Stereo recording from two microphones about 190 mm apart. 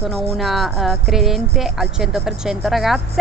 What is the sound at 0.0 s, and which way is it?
Speech, centre (ahead or behind).